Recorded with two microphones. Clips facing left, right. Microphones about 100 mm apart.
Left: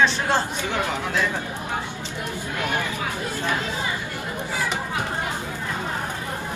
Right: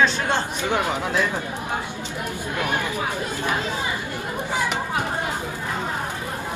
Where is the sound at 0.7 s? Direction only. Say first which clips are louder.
Right 3 dB; 20° right (ahead or behind).